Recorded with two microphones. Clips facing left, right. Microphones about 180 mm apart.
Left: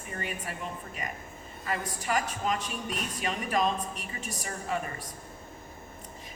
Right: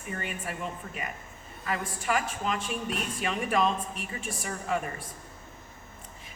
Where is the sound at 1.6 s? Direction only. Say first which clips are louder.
Right 1 dB; 40° left (ahead or behind).